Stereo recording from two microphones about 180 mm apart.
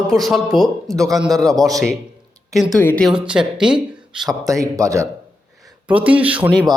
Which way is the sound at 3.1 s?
5° right (ahead or behind).